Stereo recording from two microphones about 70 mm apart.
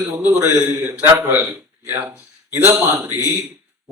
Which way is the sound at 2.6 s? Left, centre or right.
Right.